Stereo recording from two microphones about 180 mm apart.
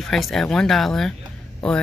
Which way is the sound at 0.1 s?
Centre (ahead or behind).